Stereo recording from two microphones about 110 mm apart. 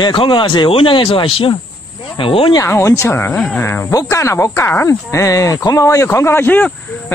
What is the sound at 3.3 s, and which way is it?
Speech, 10° left (ahead or behind).